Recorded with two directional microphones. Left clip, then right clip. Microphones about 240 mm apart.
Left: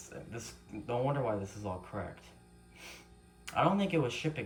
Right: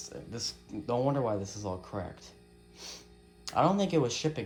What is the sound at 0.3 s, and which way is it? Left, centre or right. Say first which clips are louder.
Speech: right 7 dB; centre.